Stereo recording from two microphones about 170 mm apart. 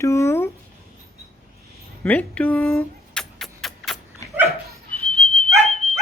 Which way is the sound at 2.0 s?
10° left (ahead or behind).